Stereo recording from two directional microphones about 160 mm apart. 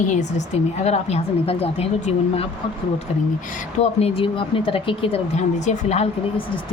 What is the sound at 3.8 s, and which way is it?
A woman's voice, 40° left (ahead or behind).